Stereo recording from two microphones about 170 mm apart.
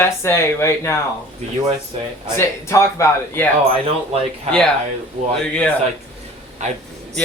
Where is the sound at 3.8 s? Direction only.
35° right (ahead or behind).